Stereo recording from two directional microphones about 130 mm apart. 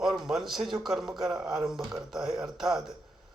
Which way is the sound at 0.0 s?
5° right (ahead or behind).